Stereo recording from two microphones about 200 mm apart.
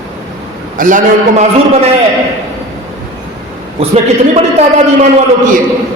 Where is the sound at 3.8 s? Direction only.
30° right (ahead or behind).